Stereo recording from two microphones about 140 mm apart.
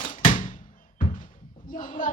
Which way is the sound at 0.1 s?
70° left (ahead or behind).